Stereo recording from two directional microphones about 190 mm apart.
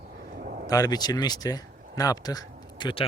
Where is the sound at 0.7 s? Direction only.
20° left (ahead or behind).